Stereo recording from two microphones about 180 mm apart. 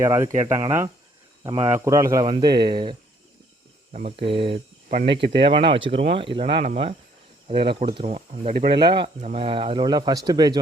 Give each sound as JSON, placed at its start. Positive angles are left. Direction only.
{"t": 0.0, "sound": "speech", "side_deg": -15}
{"t": 1.5, "sound": "speech", "side_deg": -20}
{"t": 5.1, "sound": "speech", "side_deg": -70}
{"t": 5.4, "sound": "speech", "side_deg": -30}
{"t": 8.5, "sound": "speech", "side_deg": -60}
{"t": 8.8, "sound": "speech", "side_deg": -25}